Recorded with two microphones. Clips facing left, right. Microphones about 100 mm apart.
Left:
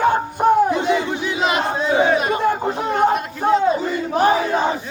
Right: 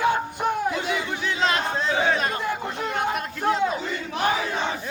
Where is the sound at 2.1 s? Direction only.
15° left (ahead or behind).